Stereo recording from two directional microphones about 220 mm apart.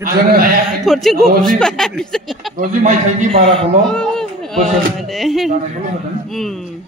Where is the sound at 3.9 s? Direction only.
5° left (ahead or behind).